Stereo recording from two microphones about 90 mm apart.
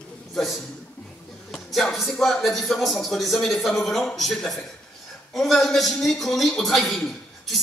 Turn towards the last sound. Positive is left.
turn(degrees=5)  # may be behind; listen again after turning